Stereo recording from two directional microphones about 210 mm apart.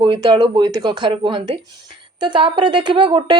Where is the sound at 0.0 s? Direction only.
25° right (ahead or behind).